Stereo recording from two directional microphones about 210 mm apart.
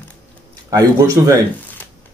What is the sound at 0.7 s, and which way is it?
Speech, 15° right (ahead or behind).